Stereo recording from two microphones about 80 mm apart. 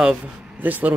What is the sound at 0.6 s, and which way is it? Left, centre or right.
Speech, right.